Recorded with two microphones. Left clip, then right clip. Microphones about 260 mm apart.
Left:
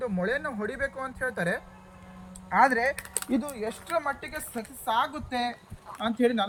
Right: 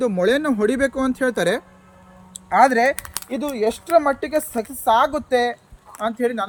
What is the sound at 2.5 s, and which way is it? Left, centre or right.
A man's voice, right.